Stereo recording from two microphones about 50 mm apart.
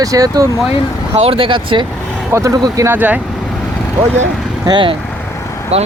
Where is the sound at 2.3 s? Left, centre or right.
Right.